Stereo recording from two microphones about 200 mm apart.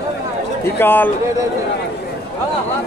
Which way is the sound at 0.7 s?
10° left (ahead or behind).